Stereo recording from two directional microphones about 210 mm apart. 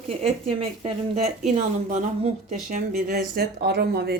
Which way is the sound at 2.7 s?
35° right (ahead or behind).